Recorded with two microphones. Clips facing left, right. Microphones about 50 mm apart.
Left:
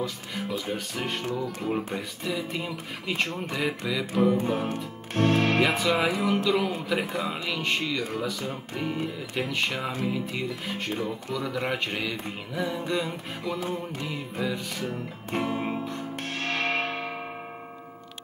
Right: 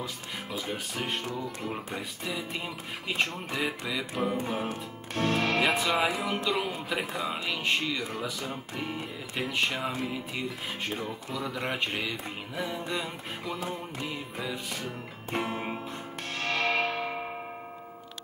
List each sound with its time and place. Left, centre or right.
0.0 s speech: centre
2.0 s music: centre
5.1 s music: left
5.6 s music: centre
7.4 s speech: centre
8.1 s music: centre
16.2 s music: left